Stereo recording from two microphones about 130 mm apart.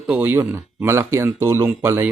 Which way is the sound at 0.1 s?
15° right (ahead or behind).